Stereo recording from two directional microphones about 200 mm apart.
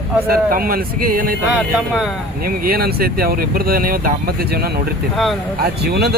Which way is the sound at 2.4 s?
50° right (ahead or behind).